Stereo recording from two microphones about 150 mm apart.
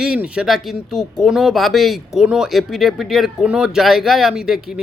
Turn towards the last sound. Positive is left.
turn(degrees=-5)  # may be behind; listen again after turning